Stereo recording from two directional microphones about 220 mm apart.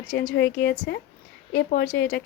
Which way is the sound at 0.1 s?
45° left (ahead or behind).